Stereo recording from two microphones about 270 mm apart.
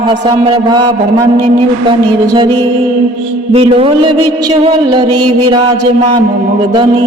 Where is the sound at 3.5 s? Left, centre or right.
Right.